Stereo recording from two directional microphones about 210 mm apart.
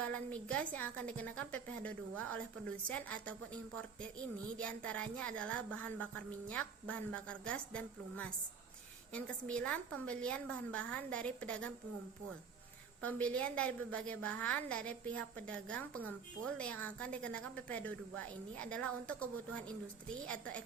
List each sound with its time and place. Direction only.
0.0 s a woman's voice: 5° left (ahead or behind)
13.1 s a woman's voice: 5° left (ahead or behind)